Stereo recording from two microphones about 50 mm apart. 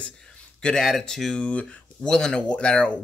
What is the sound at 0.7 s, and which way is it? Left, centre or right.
Speech, centre.